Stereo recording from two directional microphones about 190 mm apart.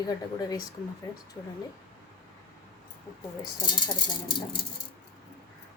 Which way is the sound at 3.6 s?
25° left (ahead or behind).